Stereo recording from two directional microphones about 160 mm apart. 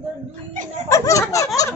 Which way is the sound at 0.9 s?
20° left (ahead or behind).